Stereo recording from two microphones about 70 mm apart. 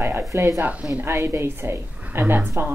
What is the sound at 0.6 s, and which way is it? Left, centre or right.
Speech, right.